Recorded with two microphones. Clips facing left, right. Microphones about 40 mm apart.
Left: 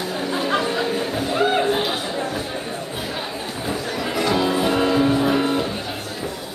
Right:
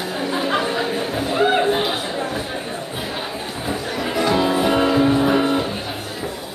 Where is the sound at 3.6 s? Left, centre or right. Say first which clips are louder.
Right 1 dB; centre.